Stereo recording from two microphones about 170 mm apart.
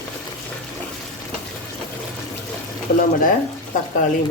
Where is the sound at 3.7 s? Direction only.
50° left (ahead or behind).